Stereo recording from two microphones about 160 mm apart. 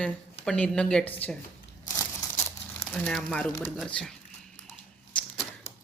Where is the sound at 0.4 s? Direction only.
5° left (ahead or behind).